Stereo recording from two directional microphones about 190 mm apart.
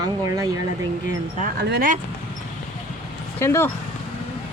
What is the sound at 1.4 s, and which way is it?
Speech, 55° right (ahead or behind).